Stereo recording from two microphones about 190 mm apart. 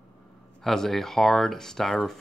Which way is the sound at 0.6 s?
Centre (ahead or behind).